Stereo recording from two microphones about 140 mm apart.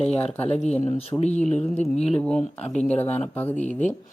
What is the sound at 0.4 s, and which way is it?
Speech, 50° left (ahead or behind).